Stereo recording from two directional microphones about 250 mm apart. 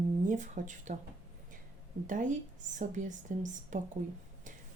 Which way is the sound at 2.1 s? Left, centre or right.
Right.